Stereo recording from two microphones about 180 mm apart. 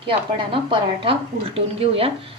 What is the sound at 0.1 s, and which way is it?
A woman's voice, 30° right (ahead or behind).